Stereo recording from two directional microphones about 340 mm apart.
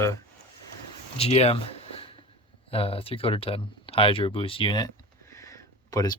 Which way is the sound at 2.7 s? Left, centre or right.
Centre.